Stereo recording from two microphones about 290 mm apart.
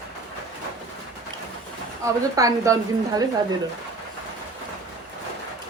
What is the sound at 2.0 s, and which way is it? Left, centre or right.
A woman's voice, centre.